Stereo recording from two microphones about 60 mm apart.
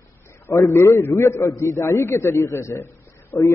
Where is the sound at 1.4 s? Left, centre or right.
Left.